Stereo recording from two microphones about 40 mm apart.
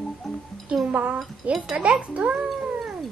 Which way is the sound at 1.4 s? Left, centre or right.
Right.